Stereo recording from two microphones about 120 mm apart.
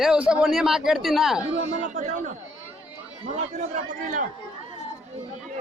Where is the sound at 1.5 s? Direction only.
70° right (ahead or behind); by 2.3 s 90° right.